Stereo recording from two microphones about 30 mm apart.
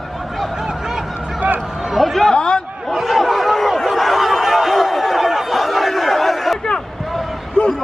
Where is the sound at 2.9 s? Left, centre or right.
Centre.